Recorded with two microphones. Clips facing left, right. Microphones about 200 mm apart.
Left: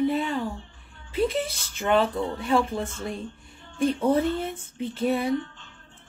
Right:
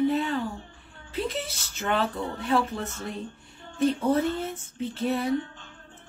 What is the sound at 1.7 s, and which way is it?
A woman's voice, 10° left (ahead or behind).